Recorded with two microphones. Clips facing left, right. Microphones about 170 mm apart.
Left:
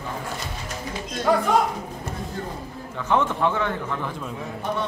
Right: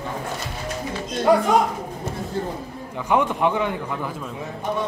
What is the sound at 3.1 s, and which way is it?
A man's voice, 15° right (ahead or behind).